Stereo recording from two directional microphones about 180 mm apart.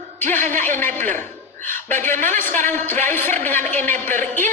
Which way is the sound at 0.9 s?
45° right (ahead or behind).